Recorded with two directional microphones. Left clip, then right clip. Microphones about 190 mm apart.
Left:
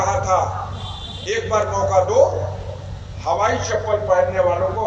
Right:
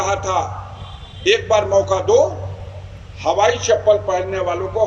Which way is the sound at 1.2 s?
60° right (ahead or behind).